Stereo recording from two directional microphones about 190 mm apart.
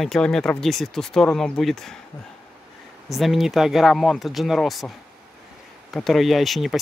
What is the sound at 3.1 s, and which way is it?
Speech, centre (ahead or behind).